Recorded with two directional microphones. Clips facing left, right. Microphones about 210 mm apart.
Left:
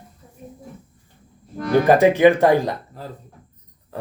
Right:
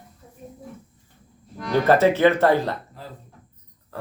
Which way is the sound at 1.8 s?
15° left (ahead or behind).